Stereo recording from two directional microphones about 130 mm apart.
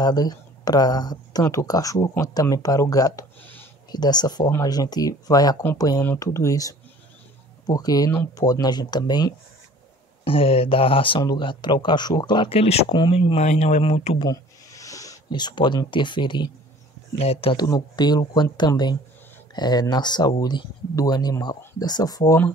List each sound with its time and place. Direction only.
0.0 s speech: 30° left (ahead or behind)
10.2 s speech: 45° left (ahead or behind)
12.9 s speech: 40° left (ahead or behind)
13.5 s speech: 65° left (ahead or behind)
13.9 s speech: 50° left (ahead or behind)
14.2 s speech: 25° left (ahead or behind)
17.2 s speech: 50° left (ahead or behind)
17.6 s speech: 30° left (ahead or behind)